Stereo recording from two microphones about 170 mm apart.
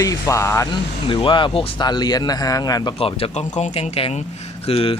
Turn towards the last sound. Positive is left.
turn(degrees=35)  # may be behind; listen again after turning